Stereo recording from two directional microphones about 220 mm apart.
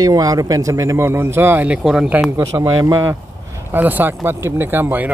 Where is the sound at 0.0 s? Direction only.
15° right (ahead or behind).